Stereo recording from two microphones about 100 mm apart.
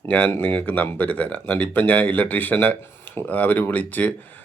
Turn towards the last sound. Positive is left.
turn(degrees=15)  # may be behind; listen again after turning